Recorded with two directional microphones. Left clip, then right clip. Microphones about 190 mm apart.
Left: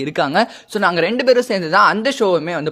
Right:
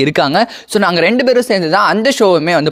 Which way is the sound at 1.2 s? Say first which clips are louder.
Right 3 dB; 25° right (ahead or behind).